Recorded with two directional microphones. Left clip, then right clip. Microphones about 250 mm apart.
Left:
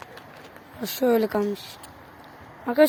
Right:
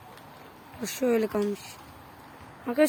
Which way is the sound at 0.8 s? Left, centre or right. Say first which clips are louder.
Left 4 dB; centre.